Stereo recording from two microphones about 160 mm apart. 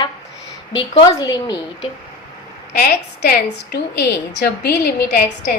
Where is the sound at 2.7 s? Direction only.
80° left.